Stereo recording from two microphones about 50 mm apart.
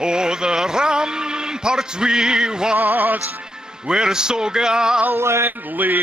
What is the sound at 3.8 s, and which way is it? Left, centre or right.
A man's voice, centre.